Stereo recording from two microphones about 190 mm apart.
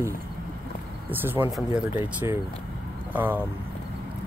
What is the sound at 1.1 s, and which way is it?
Speech, 10° right (ahead or behind).